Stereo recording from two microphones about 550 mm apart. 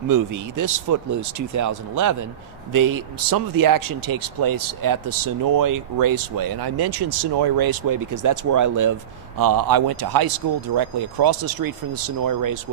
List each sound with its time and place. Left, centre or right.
0.1 s speech: right